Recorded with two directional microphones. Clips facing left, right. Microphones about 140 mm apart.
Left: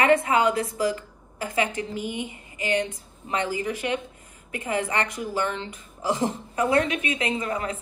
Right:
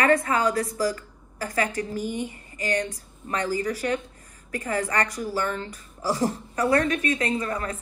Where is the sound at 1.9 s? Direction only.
45° right (ahead or behind).